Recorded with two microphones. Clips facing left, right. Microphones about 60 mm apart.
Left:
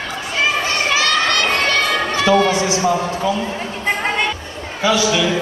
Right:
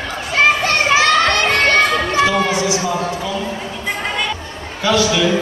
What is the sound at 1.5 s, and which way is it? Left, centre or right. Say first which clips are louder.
Music: right 3 dB; right.